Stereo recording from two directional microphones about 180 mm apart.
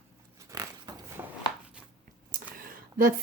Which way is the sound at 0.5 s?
20° right (ahead or behind).